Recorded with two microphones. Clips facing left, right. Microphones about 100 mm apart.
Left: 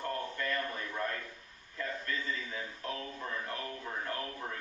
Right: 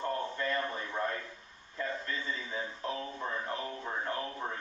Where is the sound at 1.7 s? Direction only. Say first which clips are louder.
Right 1 dB; 25° right (ahead or behind).